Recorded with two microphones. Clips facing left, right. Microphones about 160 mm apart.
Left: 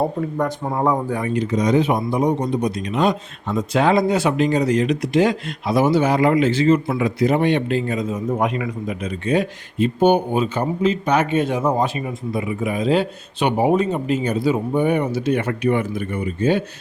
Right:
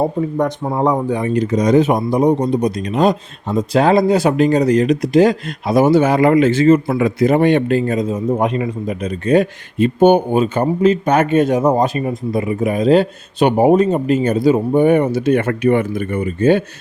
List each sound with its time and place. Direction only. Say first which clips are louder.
0.3 s speech: right 4 dB; 20° right (ahead or behind)
1.3 s a man's voice: right 4 dB; 45° right (ahead or behind)
8.1 s a man's voice: right 4 dB; 30° right (ahead or behind); by 16.6 s 55° right (ahead or behind)